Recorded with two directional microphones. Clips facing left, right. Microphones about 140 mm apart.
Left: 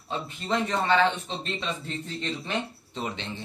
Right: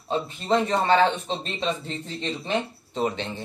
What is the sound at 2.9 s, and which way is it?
Speech, 40° right (ahead or behind).